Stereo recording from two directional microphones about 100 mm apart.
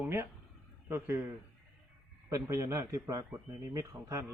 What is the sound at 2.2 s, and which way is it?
A man's voice, 30° right (ahead or behind).